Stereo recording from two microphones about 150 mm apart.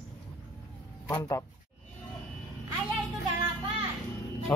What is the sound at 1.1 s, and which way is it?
Speech, 20° left (ahead or behind).